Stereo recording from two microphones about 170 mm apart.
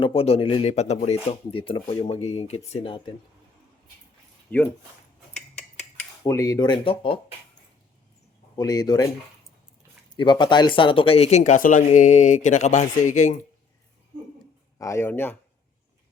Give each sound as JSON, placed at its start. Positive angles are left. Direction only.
{"t": 0.0, "sound": "speech", "side_deg": 35}
{"t": 4.5, "sound": "speech", "side_deg": 10}
{"t": 5.3, "sound": "a sound", "side_deg": 5}
{"t": 6.2, "sound": "speech", "side_deg": 20}
{"t": 8.5, "sound": "speech", "side_deg": 25}
{"t": 10.2, "sound": "speech", "side_deg": 25}
{"t": 14.8, "sound": "speech", "side_deg": 15}